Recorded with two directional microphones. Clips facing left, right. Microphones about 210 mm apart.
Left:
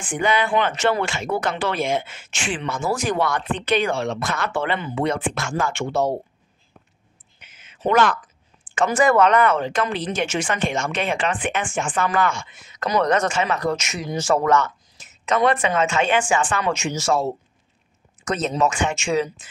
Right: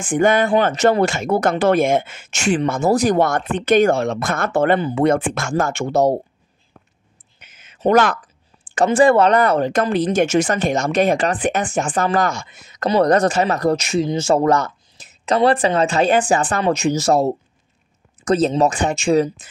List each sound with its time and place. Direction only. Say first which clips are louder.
0.0 s speech: right 6 dB; 45° right (ahead or behind)
7.3 s a sound: right 2 dB; 45° right (ahead or behind)
8.6 s speech: right 5 dB; 35° right (ahead or behind)